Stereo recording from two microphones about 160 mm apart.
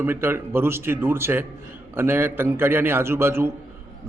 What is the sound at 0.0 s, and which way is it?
A man's voice, 15° right (ahead or behind).